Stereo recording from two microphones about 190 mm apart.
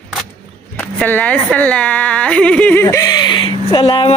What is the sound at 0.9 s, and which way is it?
Speech, 10° left (ahead or behind).